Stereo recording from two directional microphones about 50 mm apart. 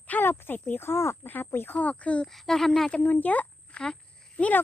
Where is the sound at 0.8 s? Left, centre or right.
Left.